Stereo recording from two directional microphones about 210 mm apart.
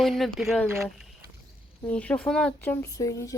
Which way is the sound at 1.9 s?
5° left (ahead or behind).